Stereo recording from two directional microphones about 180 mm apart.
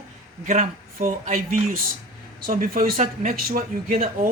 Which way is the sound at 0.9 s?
50° right (ahead or behind).